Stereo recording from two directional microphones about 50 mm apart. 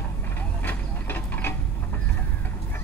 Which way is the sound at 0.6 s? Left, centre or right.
Left.